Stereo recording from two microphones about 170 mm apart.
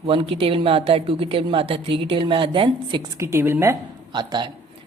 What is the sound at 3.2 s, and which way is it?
Speech, 15° right (ahead or behind).